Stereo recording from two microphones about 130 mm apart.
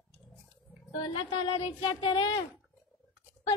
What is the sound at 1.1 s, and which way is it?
Speech, 40° left (ahead or behind).